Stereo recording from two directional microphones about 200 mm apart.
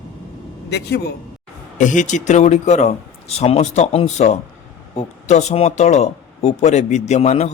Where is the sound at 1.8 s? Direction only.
40° left (ahead or behind).